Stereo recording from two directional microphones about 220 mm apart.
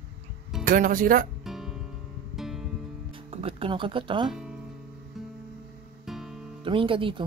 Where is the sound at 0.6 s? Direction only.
40° right (ahead or behind).